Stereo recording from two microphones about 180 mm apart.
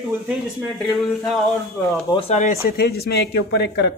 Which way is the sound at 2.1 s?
35° left (ahead or behind).